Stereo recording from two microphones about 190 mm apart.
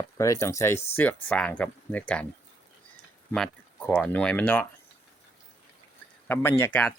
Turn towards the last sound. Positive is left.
turn(degrees=10)  # may be behind; listen again after turning